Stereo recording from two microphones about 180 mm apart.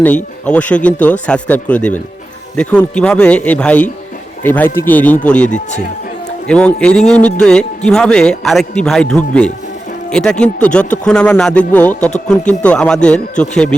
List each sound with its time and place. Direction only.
0.4 s speech: 5° left (ahead or behind)
5.5 s speech: 45° left (ahead or behind)
6.5 s speech: 5° left (ahead or behind)